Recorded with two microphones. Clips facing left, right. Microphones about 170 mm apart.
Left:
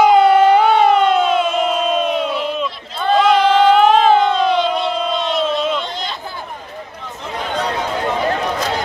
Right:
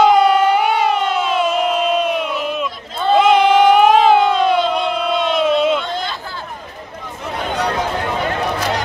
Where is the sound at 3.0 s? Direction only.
20° right (ahead or behind).